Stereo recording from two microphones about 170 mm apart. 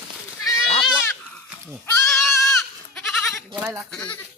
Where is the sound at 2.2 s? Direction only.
Centre (ahead or behind).